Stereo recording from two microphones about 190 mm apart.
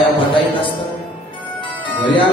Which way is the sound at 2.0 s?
25° left (ahead or behind).